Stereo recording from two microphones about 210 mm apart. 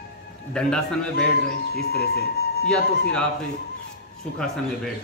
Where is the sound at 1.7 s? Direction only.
50° left (ahead or behind).